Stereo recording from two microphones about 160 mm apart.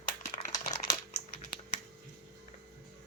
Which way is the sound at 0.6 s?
20° left (ahead or behind).